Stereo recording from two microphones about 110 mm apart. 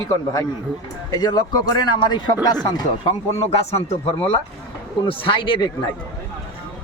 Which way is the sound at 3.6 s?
65° left (ahead or behind).